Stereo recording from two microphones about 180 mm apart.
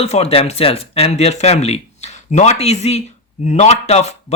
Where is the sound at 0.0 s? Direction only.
35° left (ahead or behind).